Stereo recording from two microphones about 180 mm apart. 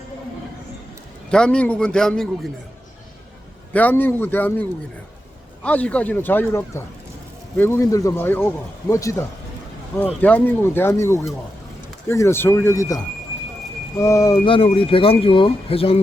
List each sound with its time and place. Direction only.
1.3 s a man's voice: 5° left (ahead or behind)
3.7 s speech: 10° left (ahead or behind)
5.6 s speech: 5° left (ahead or behind)
14.0 s speech: 20° left (ahead or behind)
14.4 s speech: 30° left (ahead or behind)